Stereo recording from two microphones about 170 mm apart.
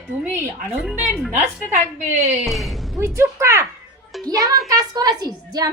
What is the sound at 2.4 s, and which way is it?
Speech, centre (ahead or behind).